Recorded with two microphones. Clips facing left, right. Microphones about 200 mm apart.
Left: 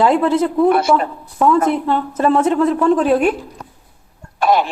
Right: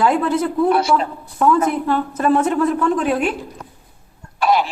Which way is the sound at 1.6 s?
25° left (ahead or behind).